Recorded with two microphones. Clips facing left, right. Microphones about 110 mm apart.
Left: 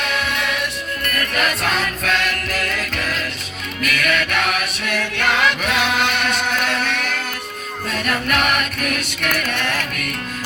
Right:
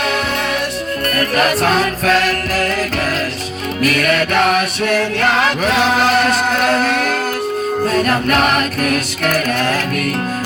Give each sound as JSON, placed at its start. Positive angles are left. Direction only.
{"t": 1.1, "sound": "music", "side_deg": -40}
{"t": 3.8, "sound": "music", "side_deg": -35}